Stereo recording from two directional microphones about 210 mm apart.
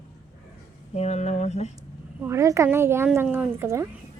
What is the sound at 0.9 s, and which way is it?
Speech, 30° left (ahead or behind).